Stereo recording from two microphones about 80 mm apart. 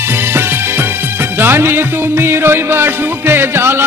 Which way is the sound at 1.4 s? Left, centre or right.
Right.